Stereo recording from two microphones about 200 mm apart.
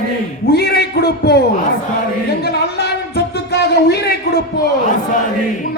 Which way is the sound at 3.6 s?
55° left (ahead or behind).